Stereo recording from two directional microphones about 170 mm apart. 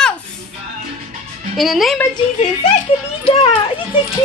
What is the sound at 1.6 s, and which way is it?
Speech, centre (ahead or behind).